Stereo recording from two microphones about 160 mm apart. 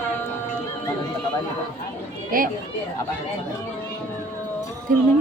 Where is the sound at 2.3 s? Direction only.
65° right (ahead or behind).